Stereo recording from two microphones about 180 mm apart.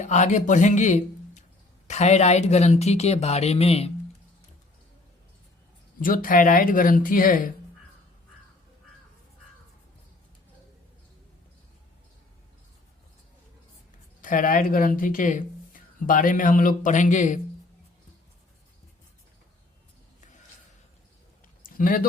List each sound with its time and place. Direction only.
0.0 s speech: 40° left (ahead or behind)
6.0 s speech: 50° left (ahead or behind)
14.2 s speech: 45° left (ahead or behind)
21.6 s a sound: 50° left (ahead or behind)